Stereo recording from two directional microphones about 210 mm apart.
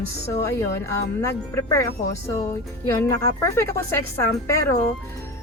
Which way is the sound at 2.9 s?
15° left (ahead or behind).